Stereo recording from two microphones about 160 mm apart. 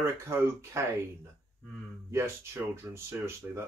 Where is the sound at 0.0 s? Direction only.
15° right (ahead or behind).